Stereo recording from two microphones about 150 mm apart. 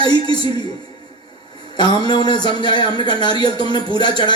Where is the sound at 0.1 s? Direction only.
30° left (ahead or behind).